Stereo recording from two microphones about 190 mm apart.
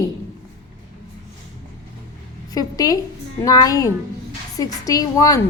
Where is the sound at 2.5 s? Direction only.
20° left (ahead or behind).